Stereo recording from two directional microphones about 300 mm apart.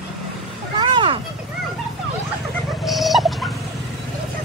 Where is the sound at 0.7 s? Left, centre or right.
Centre.